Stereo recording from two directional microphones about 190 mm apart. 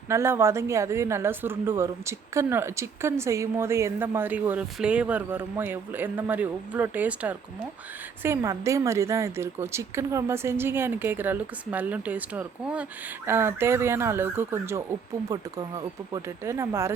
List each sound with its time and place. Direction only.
0.1 s a woman's voice: 15° right (ahead or behind)